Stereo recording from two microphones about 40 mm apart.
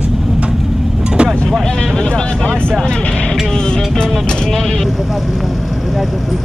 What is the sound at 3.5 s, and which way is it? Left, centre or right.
Music, centre.